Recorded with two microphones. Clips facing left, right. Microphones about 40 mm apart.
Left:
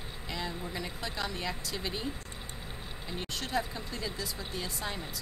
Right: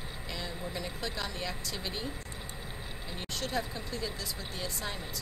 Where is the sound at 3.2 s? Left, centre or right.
Centre.